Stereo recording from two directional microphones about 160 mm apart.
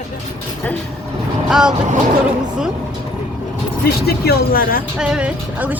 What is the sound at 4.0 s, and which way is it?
Speech, 75° left (ahead or behind).